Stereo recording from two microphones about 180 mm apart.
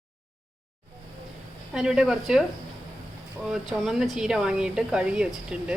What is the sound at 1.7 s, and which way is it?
Speech, 5° right (ahead or behind).